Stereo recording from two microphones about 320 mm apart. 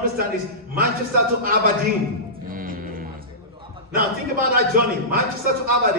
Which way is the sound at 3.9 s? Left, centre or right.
Right.